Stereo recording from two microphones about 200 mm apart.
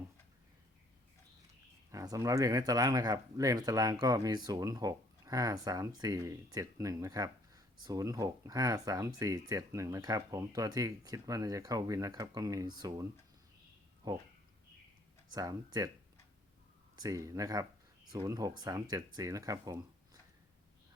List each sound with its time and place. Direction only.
1.9 s speech: 15° right (ahead or behind)
15.3 s speech: 20° right (ahead or behind)
17.0 s speech: 15° right (ahead or behind)